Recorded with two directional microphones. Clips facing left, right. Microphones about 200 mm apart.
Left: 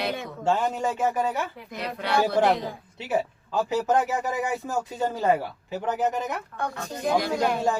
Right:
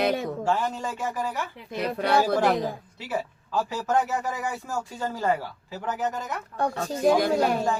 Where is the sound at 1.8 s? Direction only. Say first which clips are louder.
Right 2 dB; 45° right (ahead or behind).